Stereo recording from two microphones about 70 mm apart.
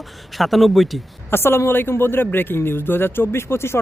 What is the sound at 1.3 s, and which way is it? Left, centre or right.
Speech, left.